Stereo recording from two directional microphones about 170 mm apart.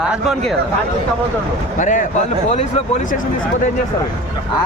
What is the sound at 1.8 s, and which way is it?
Speech, 50° left (ahead or behind).